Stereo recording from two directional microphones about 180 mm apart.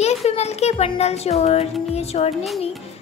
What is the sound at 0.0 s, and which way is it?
Speech, 35° left (ahead or behind).